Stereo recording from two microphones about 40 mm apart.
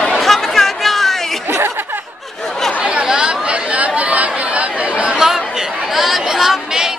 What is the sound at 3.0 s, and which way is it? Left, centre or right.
Speech, right.